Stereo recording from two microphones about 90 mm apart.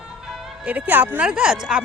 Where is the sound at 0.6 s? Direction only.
20° right (ahead or behind).